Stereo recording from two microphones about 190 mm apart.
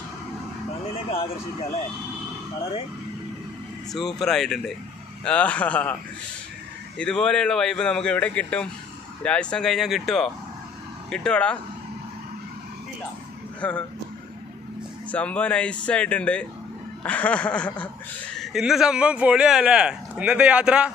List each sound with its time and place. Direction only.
0.9 s speech: 30° left (ahead or behind)
3.9 s speech: centre (ahead or behind)
5.2 s a sound: 5° left (ahead or behind)
7.0 s speech: 5° left (ahead or behind)
13.6 s speech: 5° left (ahead or behind)
15.0 s speech: 5° left (ahead or behind)
17.0 s a sound: 5° left (ahead or behind)
18.3 s speech: centre (ahead or behind)